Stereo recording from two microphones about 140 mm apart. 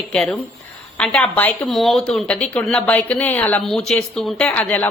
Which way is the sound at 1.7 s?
Centre (ahead or behind).